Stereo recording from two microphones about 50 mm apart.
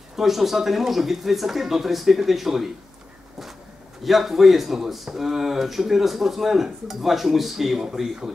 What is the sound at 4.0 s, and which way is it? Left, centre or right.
Speech, centre.